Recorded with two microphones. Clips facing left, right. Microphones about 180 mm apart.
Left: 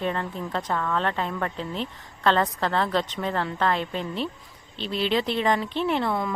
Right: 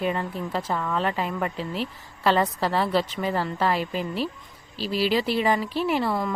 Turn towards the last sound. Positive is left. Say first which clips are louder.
# right 1 dB
turn(degrees=0)  # may be behind; listen again after turning